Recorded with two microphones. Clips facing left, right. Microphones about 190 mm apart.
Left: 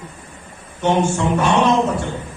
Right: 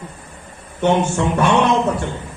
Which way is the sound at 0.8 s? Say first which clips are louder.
Right 1 dB; 60° right (ahead or behind).